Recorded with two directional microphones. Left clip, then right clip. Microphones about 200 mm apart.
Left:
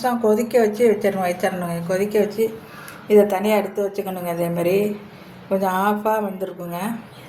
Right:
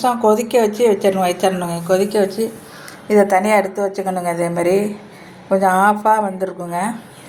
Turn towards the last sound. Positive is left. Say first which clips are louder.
# right 6 dB
turn(degrees=-10)  # may be behind; listen again after turning